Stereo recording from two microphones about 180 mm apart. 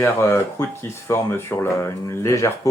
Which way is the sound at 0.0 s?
15° left (ahead or behind).